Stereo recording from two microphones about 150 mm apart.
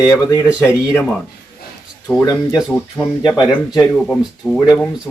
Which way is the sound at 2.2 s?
30° left (ahead or behind).